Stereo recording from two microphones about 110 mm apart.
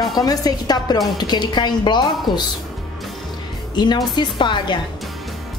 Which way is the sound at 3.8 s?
40° left (ahead or behind).